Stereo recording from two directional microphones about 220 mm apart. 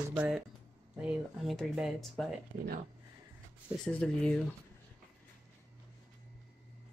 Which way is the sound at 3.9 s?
5° left (ahead or behind).